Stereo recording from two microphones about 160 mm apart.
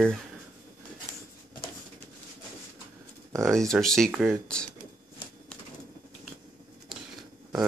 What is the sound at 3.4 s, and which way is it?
Speech, centre (ahead or behind).